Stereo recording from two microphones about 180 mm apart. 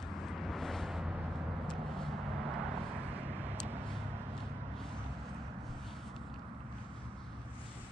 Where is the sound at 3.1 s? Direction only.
10° right (ahead or behind).